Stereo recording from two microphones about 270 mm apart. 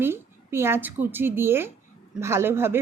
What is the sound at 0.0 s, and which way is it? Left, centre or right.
A woman's voice, centre.